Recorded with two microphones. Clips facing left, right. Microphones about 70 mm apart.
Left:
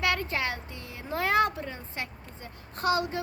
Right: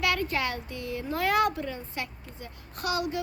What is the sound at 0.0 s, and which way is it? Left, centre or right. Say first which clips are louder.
Speech: right 1 dB; left.